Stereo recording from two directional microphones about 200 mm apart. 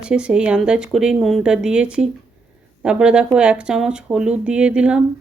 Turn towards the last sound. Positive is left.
turn(degrees=-5)  # may be behind; listen again after turning